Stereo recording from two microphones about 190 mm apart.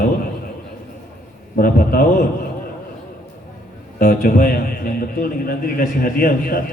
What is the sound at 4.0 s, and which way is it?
A man's voice, 50° left (ahead or behind).